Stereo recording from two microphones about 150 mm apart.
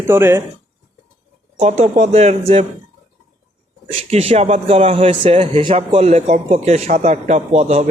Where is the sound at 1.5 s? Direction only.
50° right (ahead or behind).